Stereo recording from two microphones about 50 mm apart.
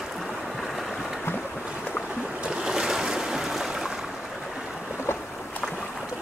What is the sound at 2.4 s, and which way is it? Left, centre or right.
Boat, centre.